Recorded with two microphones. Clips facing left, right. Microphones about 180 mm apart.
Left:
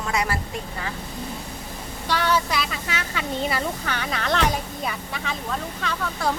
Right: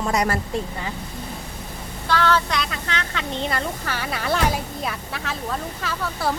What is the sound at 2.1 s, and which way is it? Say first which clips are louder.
A woman's voice: right 2 dB; 15° left (ahead or behind).